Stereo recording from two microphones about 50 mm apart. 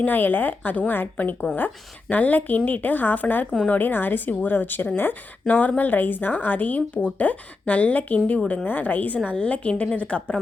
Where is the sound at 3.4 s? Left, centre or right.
Centre.